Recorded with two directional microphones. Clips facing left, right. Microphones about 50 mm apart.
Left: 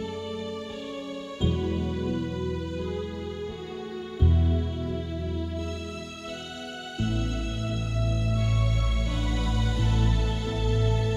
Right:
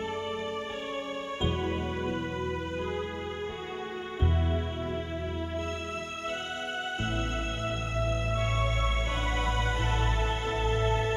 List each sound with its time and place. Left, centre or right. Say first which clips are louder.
1.4 s music: left 4 dB; right
7.9 s music: right 1 dB; right